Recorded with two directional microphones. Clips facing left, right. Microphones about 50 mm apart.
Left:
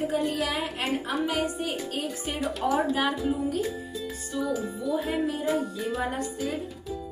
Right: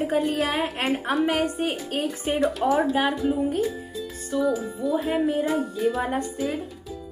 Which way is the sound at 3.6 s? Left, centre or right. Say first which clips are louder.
Right 3 dB; centre.